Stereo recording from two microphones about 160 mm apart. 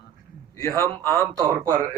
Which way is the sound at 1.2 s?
20° right (ahead or behind).